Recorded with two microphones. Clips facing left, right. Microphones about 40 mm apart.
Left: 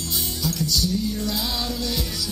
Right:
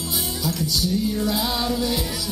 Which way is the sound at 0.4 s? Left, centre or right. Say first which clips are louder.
Left 1 dB; centre.